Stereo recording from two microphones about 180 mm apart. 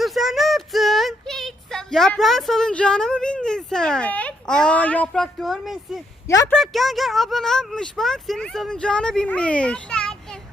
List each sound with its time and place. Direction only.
0.0 s a sound: centre (ahead or behind)
6.2 s speech: 20° left (ahead or behind)
6.5 s speech: centre (ahead or behind)